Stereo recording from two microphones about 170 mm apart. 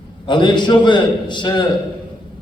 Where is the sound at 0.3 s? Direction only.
25° left (ahead or behind).